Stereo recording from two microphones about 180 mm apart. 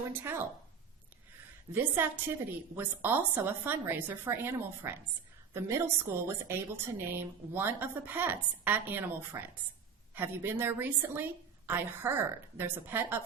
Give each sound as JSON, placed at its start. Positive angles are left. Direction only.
{"t": 0.1, "sound": "a woman's voice", "side_deg": -10}
{"t": 1.7, "sound": "a woman's voice", "side_deg": -10}